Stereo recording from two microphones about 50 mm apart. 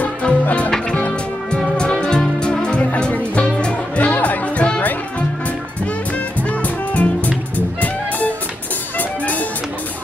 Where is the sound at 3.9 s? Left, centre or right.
Left.